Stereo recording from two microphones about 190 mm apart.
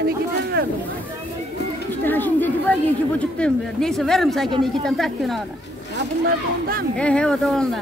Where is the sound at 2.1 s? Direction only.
10° left (ahead or behind).